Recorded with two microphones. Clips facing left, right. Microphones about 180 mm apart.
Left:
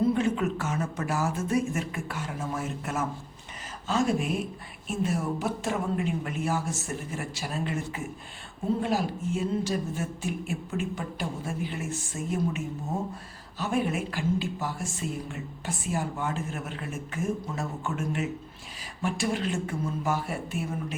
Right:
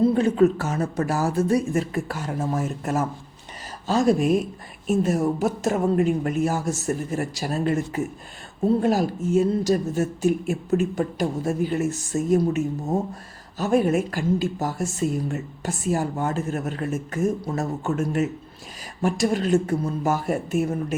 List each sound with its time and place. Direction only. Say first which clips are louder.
0.0 s speech: right 7 dB; 35° right (ahead or behind)